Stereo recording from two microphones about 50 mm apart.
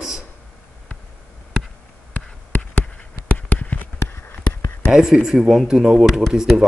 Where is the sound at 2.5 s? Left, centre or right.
Left.